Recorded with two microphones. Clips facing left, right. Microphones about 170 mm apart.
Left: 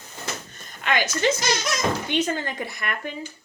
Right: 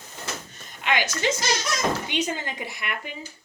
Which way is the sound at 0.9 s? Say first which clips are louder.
Left 2 dB; 15° right (ahead or behind).